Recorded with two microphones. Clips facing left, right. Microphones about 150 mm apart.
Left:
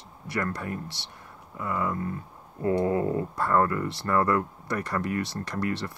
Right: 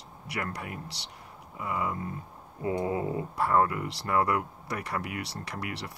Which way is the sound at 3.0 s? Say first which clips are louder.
Left 5 dB; 50° left (ahead or behind).